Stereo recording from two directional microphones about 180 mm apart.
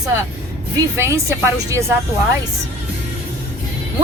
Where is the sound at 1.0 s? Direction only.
15° right (ahead or behind).